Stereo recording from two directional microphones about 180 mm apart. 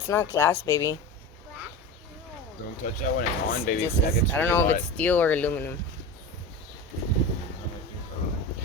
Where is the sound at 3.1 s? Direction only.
50° left (ahead or behind).